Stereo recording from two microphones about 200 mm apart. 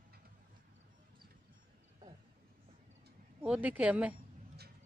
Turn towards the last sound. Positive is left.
turn(degrees=-5)  # may be behind; listen again after turning